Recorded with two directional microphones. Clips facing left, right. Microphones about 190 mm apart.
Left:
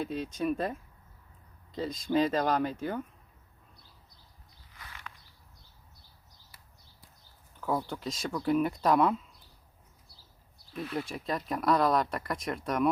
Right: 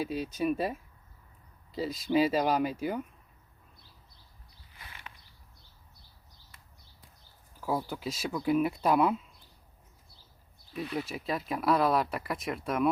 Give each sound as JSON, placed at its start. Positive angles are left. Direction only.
{"t": 0.0, "sound": "speech", "side_deg": -5}
{"t": 4.8, "sound": "a sound", "side_deg": -20}
{"t": 7.6, "sound": "speech", "side_deg": -5}
{"t": 10.8, "sound": "speech", "side_deg": -5}